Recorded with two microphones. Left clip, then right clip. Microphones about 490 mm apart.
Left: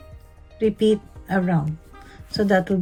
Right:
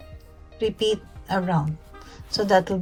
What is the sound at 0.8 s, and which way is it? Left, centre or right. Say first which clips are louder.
Speech: left 4 dB; right.